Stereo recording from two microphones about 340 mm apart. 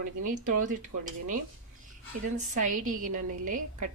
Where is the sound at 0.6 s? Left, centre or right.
Right.